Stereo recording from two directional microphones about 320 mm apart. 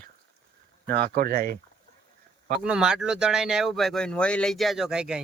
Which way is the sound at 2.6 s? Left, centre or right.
Centre.